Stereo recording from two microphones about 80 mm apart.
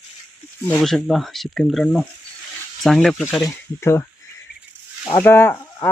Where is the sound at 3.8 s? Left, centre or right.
Left.